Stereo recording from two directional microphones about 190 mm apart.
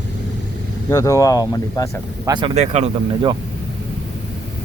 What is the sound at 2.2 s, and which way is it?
Speech, 20° right (ahead or behind).